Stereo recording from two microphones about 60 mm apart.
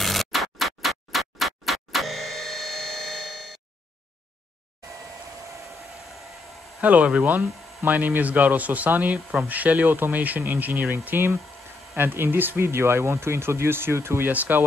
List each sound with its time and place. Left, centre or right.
0.0 s music: centre
6.8 s speech: right
14.3 s speech: right